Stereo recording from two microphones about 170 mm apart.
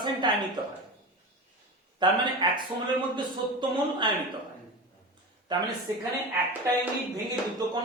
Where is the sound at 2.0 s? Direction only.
25° right (ahead or behind).